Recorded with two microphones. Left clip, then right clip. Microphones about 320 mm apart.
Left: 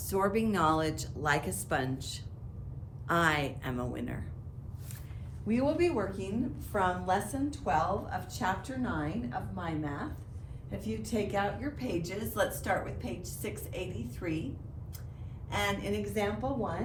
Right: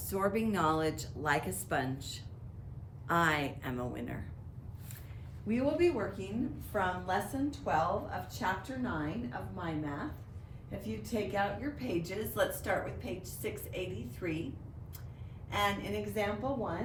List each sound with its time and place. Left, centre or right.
0.1 s speech: centre
5.5 s a woman's voice: centre
15.4 s a woman's voice: centre